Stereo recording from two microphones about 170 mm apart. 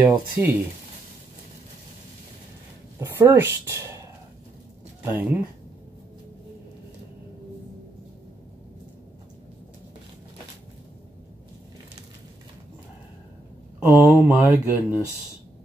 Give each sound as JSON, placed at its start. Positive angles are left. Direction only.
{"t": 0.0, "sound": "speech", "side_deg": -10}
{"t": 3.0, "sound": "speech", "side_deg": -15}
{"t": 5.0, "sound": "speech", "side_deg": -15}
{"t": 13.7, "sound": "speech", "side_deg": -10}